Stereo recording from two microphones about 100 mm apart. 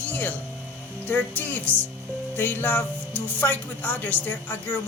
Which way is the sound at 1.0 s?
15° left (ahead or behind).